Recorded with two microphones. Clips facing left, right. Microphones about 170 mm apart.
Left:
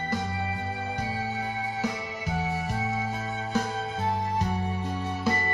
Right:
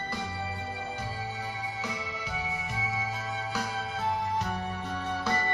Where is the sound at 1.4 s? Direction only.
50° left (ahead or behind).